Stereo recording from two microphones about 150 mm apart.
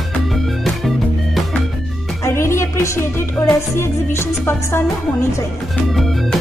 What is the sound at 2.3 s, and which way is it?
Music, 20° left (ahead or behind).